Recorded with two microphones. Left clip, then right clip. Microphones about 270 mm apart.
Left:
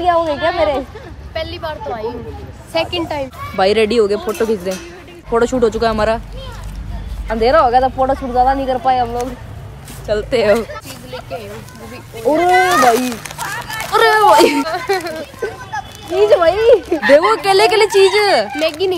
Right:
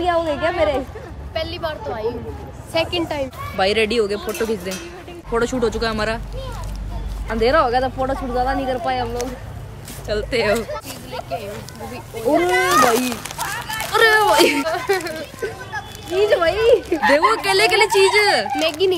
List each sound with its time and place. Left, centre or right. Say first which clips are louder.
0.0 s a woman's voice: left 5 dB; centre
1.3 s a woman's voice: left 2 dB; centre
3.5 s a child's voice: left 5 dB; centre
7.2 s speech: left 5 dB; centre
12.3 s speech: left 5 dB; right
12.8 s a sound: left 5 dB; centre
13.9 s a child's voice: left 4 dB; centre
14.7 s a child's voice: left 2 dB; centre
18.6 s a woman's voice: left 2 dB; centre